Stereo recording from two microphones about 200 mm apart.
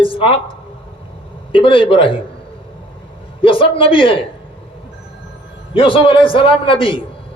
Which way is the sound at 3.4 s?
25° left (ahead or behind).